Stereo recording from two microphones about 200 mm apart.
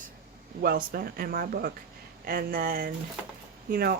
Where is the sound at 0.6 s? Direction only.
50° right (ahead or behind).